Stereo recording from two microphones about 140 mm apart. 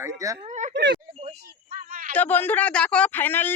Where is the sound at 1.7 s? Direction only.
80° right.